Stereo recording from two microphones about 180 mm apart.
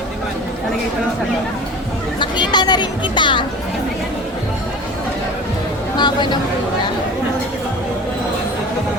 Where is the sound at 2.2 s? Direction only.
25° left (ahead or behind).